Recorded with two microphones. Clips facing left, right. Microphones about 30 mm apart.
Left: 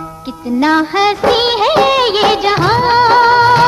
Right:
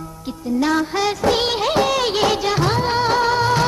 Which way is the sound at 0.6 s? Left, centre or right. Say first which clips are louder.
Left 8 dB; left.